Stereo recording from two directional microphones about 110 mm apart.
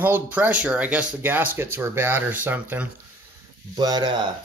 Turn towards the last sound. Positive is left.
turn(degrees=-40)  # may be behind; listen again after turning